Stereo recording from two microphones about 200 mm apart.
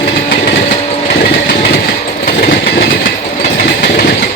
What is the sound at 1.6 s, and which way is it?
Train, 55° left (ahead or behind).